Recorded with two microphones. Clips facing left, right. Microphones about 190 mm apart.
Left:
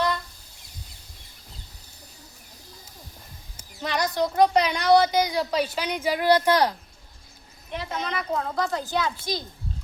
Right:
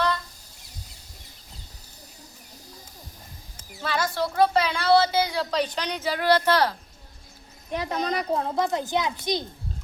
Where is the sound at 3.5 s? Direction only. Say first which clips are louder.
Even; 20° left (ahead or behind).